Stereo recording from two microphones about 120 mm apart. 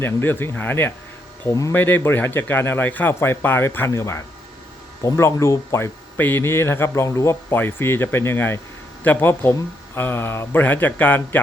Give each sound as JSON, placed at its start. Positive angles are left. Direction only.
{"t": 0.0, "sound": "speech", "side_deg": 20}
{"t": 1.7, "sound": "speech", "side_deg": 15}